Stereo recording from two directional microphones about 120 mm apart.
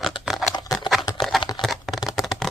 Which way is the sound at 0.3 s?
5° right (ahead or behind).